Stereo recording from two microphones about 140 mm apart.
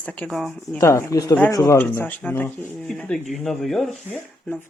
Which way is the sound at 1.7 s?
15° left (ahead or behind).